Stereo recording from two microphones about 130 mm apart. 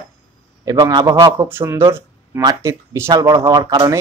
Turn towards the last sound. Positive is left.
turn(degrees=-30)  # may be behind; listen again after turning